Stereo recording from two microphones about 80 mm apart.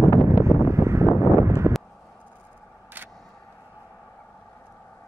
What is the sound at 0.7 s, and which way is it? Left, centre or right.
Vehicle, right.